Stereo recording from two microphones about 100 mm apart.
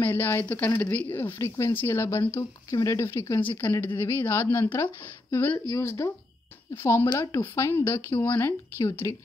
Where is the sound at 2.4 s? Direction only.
35° left (ahead or behind).